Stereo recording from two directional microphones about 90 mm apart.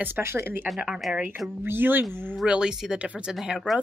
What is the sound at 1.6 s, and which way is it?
Speech, 25° right (ahead or behind).